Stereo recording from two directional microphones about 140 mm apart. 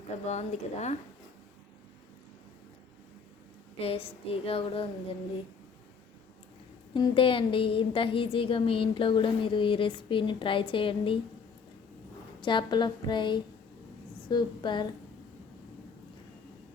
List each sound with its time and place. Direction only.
0.3 s speech: 55° left (ahead or behind)
3.8 s a woman's voice: 45° left (ahead or behind)
6.9 s a woman's voice: 35° left (ahead or behind)
12.4 s a woman's voice: 35° left (ahead or behind)